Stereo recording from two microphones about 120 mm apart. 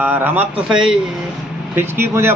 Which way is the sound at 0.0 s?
15° right (ahead or behind).